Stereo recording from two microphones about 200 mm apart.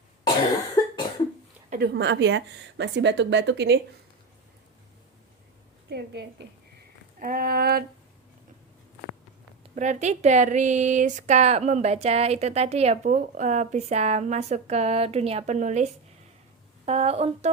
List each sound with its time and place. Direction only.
1.7 s speech: 55° right (ahead or behind)
5.9 s speech: 55° right (ahead or behind)
7.2 s a sound: 45° right (ahead or behind)
9.7 s speech: 35° right (ahead or behind)